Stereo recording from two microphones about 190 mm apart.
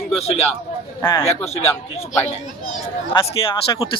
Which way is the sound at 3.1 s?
25° left (ahead or behind).